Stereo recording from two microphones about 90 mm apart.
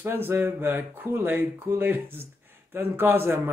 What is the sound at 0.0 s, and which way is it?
A man's voice, 25° right (ahead or behind).